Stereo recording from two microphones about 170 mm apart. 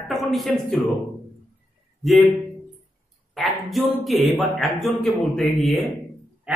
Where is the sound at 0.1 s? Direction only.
Centre (ahead or behind).